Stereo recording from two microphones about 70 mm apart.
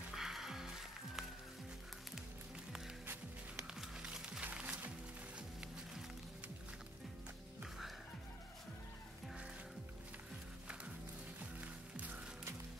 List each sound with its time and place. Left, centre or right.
0.1 s music: centre
3.7 s music: centre
11.6 s music: right